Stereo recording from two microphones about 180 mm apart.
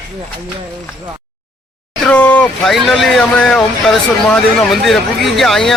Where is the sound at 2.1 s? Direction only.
10° left (ahead or behind).